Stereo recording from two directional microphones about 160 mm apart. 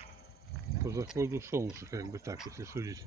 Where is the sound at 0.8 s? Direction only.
20° right (ahead or behind).